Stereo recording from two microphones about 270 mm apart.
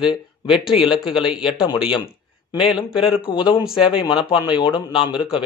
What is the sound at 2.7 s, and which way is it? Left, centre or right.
Speech, centre.